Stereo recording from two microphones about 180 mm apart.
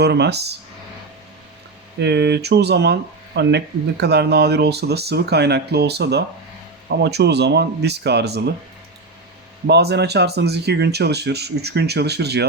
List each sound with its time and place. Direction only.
0.0 s speech: 70° right (ahead or behind)
2.0 s speech: 70° right (ahead or behind)
9.6 s speech: 65° right (ahead or behind)